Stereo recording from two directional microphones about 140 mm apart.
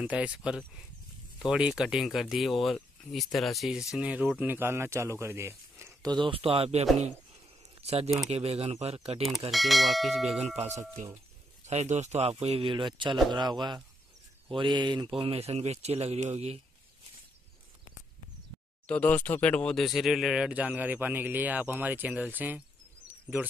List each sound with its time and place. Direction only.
0.0 s speech: 10° right (ahead or behind)
5.2 s a sound: 20° right (ahead or behind)
6.1 s speech: 40° right (ahead or behind)
9.5 s speech: centre (ahead or behind)
10.4 s speech: 50° right (ahead or behind)
18.9 s speech: 10° left (ahead or behind); by 22.6 s 10° right (ahead or behind)
23.0 s a sound: 15° right (ahead or behind)